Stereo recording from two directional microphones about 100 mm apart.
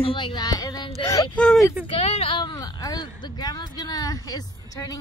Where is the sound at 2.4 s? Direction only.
45° left (ahead or behind).